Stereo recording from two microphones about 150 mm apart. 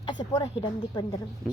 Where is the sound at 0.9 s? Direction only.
25° left (ahead or behind).